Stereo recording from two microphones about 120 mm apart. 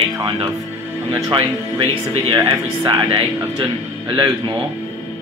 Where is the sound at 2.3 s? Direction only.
35° right (ahead or behind).